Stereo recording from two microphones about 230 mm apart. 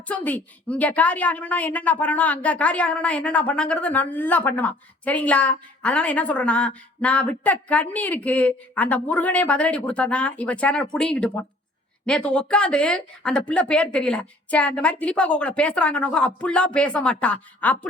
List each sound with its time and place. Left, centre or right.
0.1 s a woman's voice: centre